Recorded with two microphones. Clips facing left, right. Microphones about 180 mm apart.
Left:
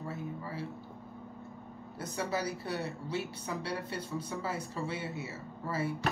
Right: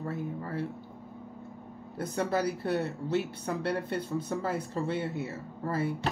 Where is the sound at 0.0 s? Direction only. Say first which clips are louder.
Right 4 dB; 55° right (ahead or behind).